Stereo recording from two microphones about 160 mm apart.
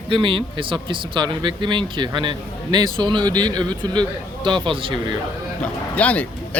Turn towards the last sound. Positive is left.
turn(degrees=10)  # may be behind; listen again after turning